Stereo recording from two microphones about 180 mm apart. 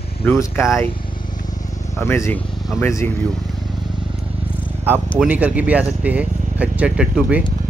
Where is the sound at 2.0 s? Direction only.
15° left (ahead or behind).